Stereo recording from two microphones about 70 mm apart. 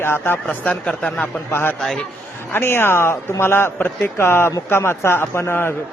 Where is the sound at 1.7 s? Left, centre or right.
Centre.